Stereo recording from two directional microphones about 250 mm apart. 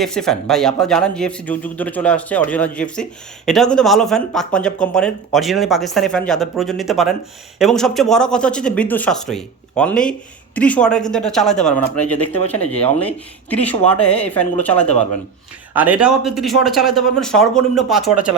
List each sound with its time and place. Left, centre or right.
0.0 s a man's voice: centre
12.5 s speech: left
12.8 s a man's voice: centre
15.7 s a man's voice: centre